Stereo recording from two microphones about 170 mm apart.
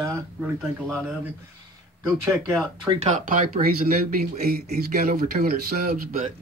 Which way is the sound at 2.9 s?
45° right (ahead or behind).